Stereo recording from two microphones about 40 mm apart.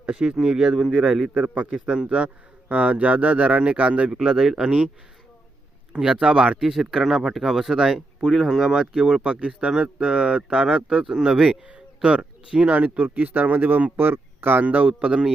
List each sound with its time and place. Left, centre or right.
0.0 s speech: right
1.3 s a man's voice: right
4.1 s speech: centre
4.6 s speech: right
5.9 s speech: right
6.7 s speech: centre
8.7 s speech: centre
12.7 s speech: right
14.0 s speech: right
14.6 s speech: right
14.9 s speech: right